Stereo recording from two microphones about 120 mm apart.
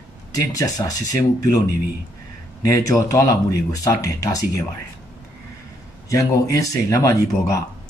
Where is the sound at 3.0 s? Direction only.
30° left (ahead or behind).